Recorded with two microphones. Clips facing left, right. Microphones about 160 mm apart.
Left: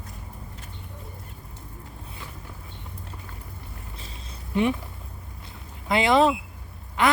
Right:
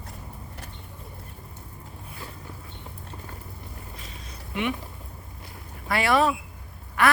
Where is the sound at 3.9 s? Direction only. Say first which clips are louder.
Even; 30° left (ahead or behind).